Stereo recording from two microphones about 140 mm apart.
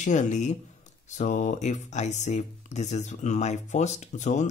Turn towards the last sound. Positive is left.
turn(degrees=60)  # may be behind; listen again after turning